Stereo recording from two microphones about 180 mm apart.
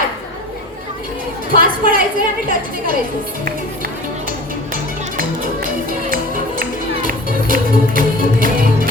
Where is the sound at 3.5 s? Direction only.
55° right (ahead or behind).